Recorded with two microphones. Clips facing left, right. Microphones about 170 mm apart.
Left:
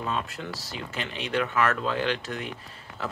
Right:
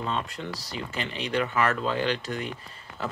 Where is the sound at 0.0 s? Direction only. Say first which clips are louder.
Even; 5° left (ahead or behind).